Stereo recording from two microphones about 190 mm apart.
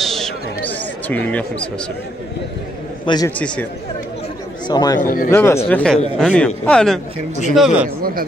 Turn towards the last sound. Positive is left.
turn(degrees=0)  # may be behind; listen again after turning